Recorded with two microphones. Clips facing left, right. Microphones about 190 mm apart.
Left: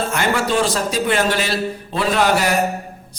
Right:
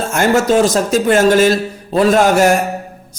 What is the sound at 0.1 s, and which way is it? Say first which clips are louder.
A man's voice: right 7 dB; 45° right (ahead or behind).